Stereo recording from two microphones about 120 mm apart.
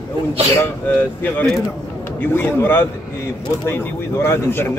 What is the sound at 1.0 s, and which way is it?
A man's voice, 15° left (ahead or behind).